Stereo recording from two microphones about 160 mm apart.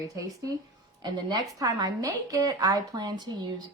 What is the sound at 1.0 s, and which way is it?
A woman's voice, 25° right (ahead or behind).